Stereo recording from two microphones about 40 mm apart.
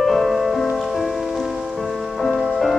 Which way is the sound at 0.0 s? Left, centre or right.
Centre.